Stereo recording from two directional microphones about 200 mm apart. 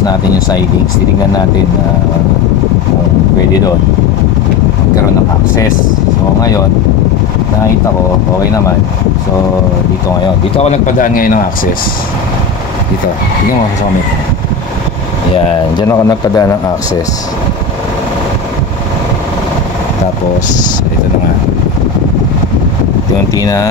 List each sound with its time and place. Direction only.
10.5 s speech: 35° left (ahead or behind)
15.3 s speech: 25° left (ahead or behind)
15.9 s a man's voice: 15° left (ahead or behind)
23.3 s a man's voice: 15° left (ahead or behind)